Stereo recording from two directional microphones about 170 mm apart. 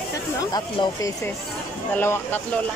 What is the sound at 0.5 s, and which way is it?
Speech, 25° left (ahead or behind).